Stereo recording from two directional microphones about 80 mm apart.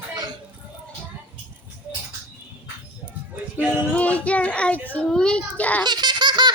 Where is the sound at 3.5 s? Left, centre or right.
Centre.